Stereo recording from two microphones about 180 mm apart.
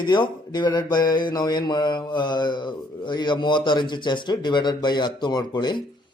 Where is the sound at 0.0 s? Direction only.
25° left (ahead or behind).